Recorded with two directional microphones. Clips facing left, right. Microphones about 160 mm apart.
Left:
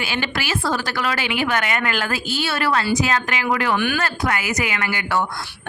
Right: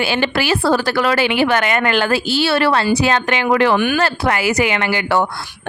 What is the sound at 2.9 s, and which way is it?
Speech, 70° right (ahead or behind).